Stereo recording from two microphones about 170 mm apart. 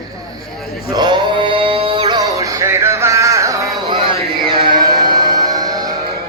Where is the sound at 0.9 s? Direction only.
25° right (ahead or behind).